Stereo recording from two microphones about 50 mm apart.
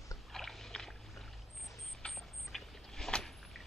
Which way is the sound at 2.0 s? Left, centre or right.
Centre.